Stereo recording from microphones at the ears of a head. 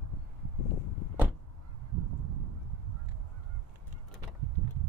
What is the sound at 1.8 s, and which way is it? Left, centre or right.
Goose, right.